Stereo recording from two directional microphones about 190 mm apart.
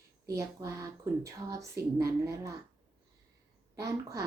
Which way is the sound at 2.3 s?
15° right (ahead or behind).